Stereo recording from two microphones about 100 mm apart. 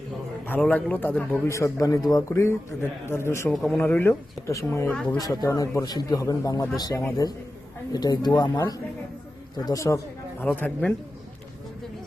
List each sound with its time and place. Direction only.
0.7 s a man's voice: 15° left (ahead or behind)
1.5 s a man's voice: 30° left (ahead or behind)
3.5 s speech: centre (ahead or behind)
3.8 s a man's voice: 20° left (ahead or behind)
10.4 s a man's voice: 15° left (ahead or behind)